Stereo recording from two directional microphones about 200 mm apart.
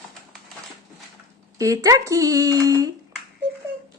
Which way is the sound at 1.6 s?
15° right (ahead or behind).